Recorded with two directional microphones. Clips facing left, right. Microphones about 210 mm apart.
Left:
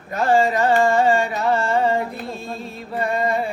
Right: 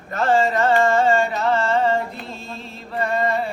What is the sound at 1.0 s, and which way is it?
Carnatic music, 15° left (ahead or behind).